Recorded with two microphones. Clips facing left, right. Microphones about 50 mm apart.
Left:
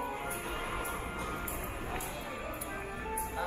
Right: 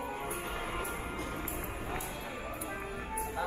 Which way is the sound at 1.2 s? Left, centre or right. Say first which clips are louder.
Even; centre.